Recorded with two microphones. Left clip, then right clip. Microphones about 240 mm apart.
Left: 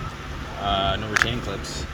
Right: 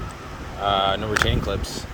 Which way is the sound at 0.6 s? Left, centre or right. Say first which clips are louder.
Right 3 dB; centre.